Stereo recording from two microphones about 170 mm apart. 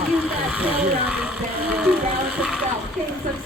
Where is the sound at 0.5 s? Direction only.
5° right (ahead or behind).